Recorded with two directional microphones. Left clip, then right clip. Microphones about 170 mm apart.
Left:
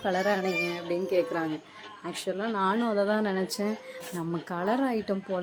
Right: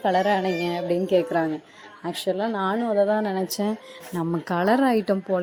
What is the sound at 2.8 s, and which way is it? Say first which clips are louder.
Speech: right 5 dB; 5° right (ahead or behind).